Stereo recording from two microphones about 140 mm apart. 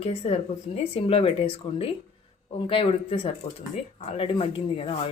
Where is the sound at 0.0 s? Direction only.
50° left (ahead or behind).